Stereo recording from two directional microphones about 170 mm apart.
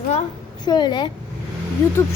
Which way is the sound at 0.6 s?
25° left (ahead or behind).